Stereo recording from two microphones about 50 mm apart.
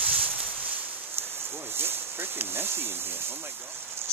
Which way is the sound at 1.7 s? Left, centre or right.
Right.